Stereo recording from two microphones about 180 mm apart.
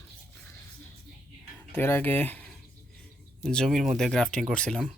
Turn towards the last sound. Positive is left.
turn(degrees=5)  # may be behind; listen again after turning